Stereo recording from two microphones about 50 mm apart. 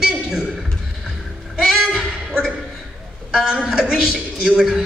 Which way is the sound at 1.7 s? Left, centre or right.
Centre.